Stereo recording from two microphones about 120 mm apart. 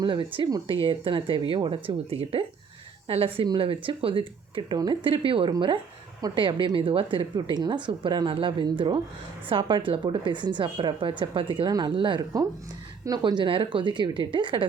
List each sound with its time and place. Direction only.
0.0 s a woman's voice: 45° right (ahead or behind)